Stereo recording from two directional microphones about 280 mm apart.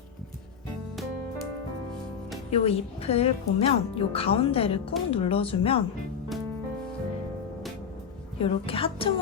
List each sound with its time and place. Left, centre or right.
2.5 s speech: left
8.4 s speech: centre